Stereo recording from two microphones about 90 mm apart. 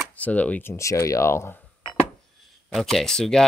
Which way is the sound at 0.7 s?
35° left (ahead or behind).